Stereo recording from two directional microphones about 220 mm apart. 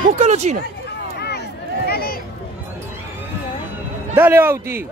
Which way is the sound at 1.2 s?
45° left (ahead or behind).